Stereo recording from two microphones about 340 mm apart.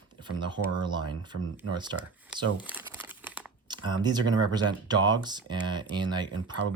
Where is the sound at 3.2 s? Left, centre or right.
Centre.